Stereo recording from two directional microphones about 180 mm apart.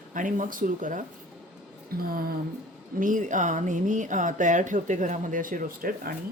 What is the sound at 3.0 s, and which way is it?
Speech, 45° right (ahead or behind).